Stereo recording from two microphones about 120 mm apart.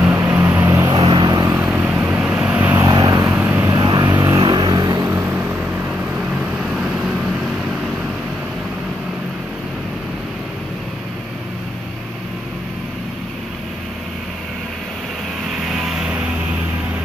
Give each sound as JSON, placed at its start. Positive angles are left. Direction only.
{"t": 0.1, "sound": "vehicle", "side_deg": -20}
{"t": 0.7, "sound": "vehicle", "side_deg": -30}
{"t": 0.9, "sound": "vehicle", "side_deg": -45}
{"t": 1.5, "sound": "vehicle", "side_deg": -15}
{"t": 2.8, "sound": "vehicle", "side_deg": -30}
{"t": 3.3, "sound": "vehicle", "side_deg": -15}
{"t": 3.7, "sound": "vehicle", "side_deg": -35}
{"t": 5.0, "sound": "vehicle", "side_deg": -20}
{"t": 15.6, "sound": "vehicle", "side_deg": 0}